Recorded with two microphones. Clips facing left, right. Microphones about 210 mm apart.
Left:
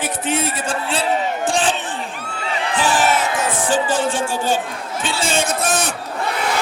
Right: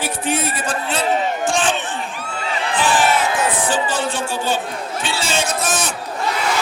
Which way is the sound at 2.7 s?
45° left (ahead or behind).